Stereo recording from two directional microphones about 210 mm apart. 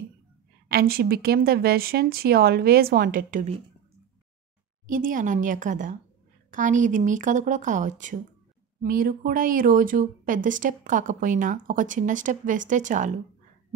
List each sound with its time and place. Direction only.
0.7 s a woman's voice: 45° right (ahead or behind)
4.8 s speech: 40° right (ahead or behind)